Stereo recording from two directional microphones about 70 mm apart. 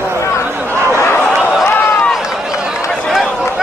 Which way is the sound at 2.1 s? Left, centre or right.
Centre.